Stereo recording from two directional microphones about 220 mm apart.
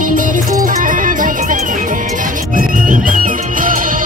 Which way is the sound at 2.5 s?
35° right (ahead or behind).